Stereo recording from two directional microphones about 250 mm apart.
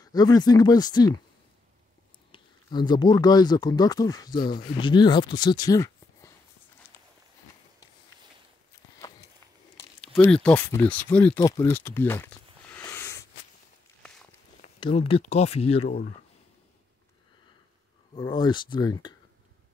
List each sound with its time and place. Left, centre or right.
0.0 s speech: centre
2.3 s speech: centre
9.8 s speech: centre
11.3 s a sound: centre
14.6 s speech: left
18.1 s speech: centre